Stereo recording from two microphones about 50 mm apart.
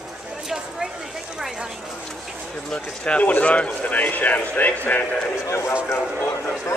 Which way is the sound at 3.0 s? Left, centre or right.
Left.